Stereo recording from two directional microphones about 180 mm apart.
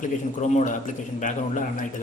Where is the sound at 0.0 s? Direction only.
45° left (ahead or behind).